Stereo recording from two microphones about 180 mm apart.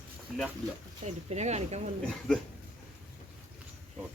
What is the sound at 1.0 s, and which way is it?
Speech, 40° right (ahead or behind).